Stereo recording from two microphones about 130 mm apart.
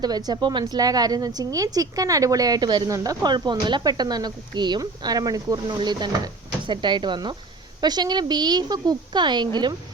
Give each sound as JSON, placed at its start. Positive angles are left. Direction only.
{"t": 0.0, "sound": "a woman's voice", "side_deg": -30}